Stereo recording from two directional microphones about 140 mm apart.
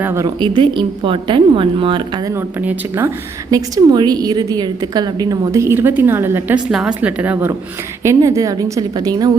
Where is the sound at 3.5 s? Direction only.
30° right (ahead or behind).